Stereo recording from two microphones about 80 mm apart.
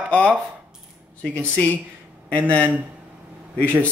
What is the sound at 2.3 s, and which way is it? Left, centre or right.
Speech, centre.